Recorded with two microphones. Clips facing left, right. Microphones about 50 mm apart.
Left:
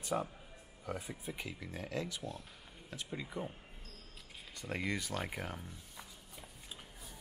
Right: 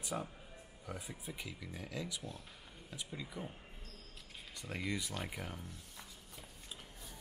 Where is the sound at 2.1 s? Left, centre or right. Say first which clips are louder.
Left 3 dB; centre.